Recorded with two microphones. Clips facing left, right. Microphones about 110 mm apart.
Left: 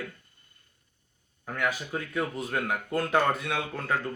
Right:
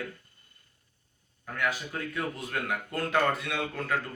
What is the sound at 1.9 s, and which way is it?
A man's voice, 20° left (ahead or behind).